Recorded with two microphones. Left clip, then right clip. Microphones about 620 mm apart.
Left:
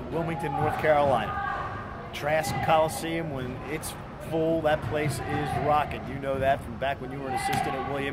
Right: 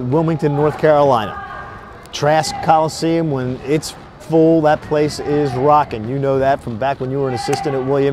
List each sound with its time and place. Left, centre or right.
0.3 s speech: right
2.2 s a man's voice: right
4.3 s a man's voice: right